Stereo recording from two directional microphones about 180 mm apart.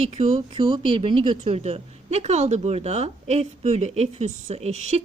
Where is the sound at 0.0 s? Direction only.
40° right (ahead or behind).